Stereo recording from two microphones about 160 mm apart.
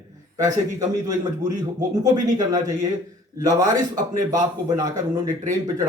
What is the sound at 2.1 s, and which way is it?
A man's voice, 25° right (ahead or behind).